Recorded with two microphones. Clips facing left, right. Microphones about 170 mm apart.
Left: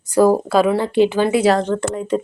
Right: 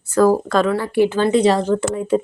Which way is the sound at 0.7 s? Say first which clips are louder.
Left 1 dB; 20° left (ahead or behind).